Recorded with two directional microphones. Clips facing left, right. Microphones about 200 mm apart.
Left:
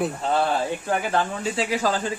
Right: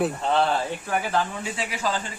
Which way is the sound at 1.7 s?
40° left (ahead or behind).